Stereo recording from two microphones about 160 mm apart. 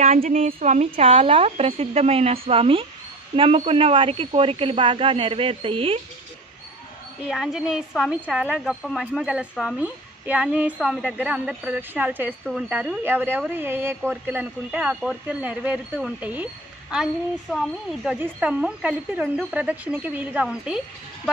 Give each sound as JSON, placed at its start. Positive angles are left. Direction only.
{"t": 0.0, "sound": "a woman's voice", "side_deg": -45}
{"t": 0.9, "sound": "speech", "side_deg": -35}
{"t": 7.2, "sound": "speech", "side_deg": 0}